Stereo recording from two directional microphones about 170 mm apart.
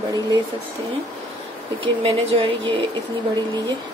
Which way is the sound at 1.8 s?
30° right (ahead or behind).